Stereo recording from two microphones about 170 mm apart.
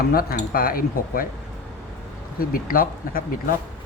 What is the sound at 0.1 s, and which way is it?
Speech, 60° left (ahead or behind).